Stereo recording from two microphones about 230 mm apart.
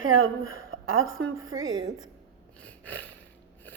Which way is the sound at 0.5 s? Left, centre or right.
Right.